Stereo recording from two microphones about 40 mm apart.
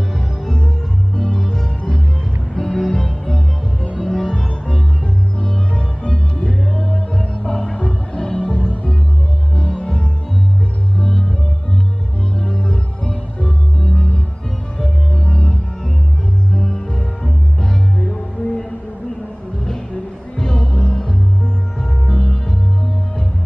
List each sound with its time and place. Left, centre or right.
1.1 s music: centre
2.6 s music: centre
4.0 s music: centre
5.4 s music: left
6.8 s music: centre
13.8 s music: centre
15.2 s music: left
16.6 s music: centre
20.3 s music: centre